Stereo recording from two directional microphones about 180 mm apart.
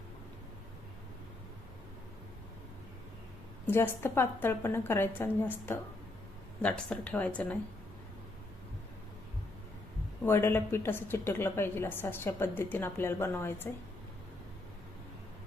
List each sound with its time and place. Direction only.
3.7 s a woman's voice: 10° left (ahead or behind)
10.2 s a woman's voice: 15° left (ahead or behind)